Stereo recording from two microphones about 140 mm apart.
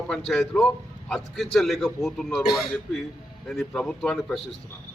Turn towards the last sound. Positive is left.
turn(degrees=5)  # may be behind; listen again after turning